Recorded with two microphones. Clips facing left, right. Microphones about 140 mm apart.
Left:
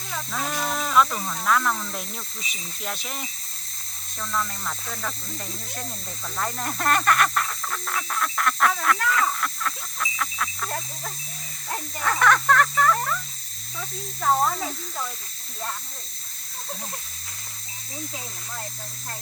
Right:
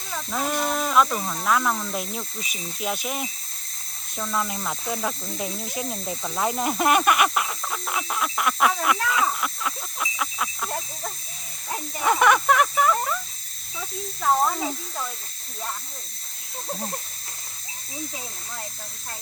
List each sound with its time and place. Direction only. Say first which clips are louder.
0.1 s speech: right 3 dB; 10° right (ahead or behind)
4.2 s snake: right 2 dB; 15° right (ahead or behind)
9.0 s a sound: even; 10° right (ahead or behind)
11.7 s speech: right 4 dB; 10° right (ahead or behind)
13.7 s snake: right 1 dB; 5° right (ahead or behind)
16.6 s a sound: right 5 dB; 30° right (ahead or behind)